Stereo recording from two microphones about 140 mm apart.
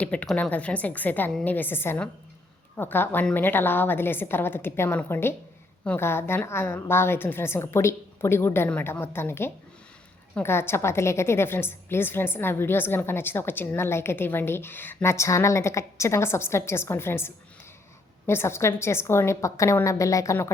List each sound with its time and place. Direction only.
0.0 s a woman's voice: 10° left (ahead or behind)